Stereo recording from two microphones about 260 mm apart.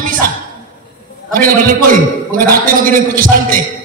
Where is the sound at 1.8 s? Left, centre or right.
Right.